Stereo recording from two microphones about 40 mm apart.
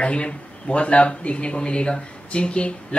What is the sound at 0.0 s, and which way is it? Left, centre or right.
Speech, left.